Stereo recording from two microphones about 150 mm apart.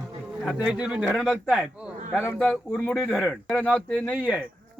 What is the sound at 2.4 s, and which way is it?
Speech, 5° left (ahead or behind).